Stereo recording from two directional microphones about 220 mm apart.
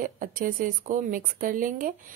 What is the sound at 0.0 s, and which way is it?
A woman's voice, 40° right (ahead or behind).